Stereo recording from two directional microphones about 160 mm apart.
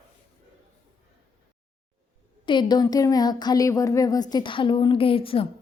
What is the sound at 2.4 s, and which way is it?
A woman's voice, 30° left (ahead or behind).